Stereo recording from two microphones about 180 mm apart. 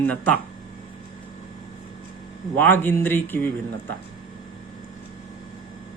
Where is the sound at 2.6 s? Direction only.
10° left (ahead or behind).